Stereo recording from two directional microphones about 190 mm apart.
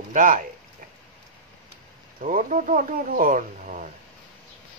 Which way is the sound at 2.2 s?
45° right (ahead or behind).